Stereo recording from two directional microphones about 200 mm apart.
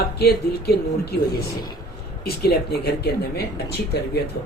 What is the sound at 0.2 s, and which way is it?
Speech, 55° left (ahead or behind).